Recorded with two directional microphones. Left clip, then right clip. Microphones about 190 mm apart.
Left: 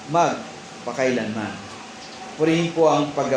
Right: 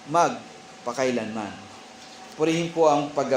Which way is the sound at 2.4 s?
30° right (ahead or behind).